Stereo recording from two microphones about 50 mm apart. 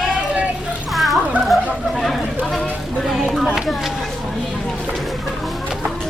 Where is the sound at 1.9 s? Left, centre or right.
Centre.